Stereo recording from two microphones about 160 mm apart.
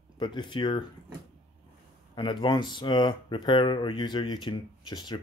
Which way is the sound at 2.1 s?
30° left (ahead or behind).